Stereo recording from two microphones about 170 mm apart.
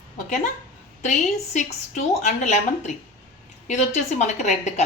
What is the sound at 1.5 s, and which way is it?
A woman's voice, 45° left (ahead or behind).